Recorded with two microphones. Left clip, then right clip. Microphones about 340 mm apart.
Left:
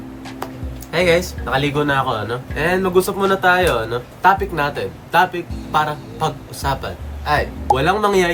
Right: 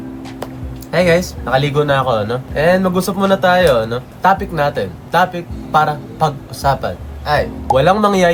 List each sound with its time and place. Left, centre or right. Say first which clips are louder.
0.9 s speech: right 3 dB; centre